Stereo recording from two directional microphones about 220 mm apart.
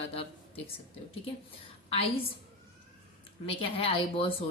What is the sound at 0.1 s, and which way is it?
Speech, 25° left (ahead or behind).